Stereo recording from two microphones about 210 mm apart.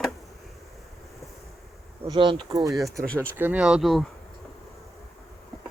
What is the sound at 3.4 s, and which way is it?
Speech, 5° right (ahead or behind).